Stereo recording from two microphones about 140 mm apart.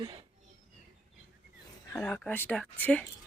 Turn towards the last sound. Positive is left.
turn(degrees=10)  # may be behind; listen again after turning